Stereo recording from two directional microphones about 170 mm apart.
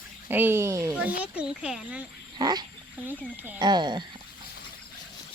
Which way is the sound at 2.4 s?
25° right (ahead or behind).